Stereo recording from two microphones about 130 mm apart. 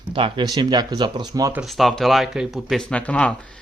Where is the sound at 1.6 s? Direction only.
Centre (ahead or behind).